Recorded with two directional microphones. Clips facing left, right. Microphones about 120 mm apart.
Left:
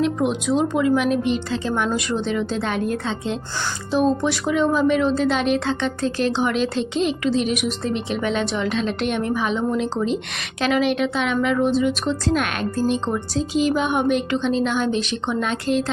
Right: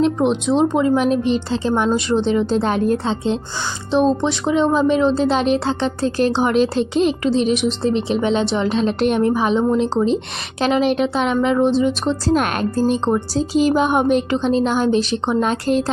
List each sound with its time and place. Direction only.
0.0 s speech: 30° right (ahead or behind)